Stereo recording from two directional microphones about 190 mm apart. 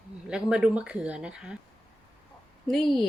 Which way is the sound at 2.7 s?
Centre (ahead or behind).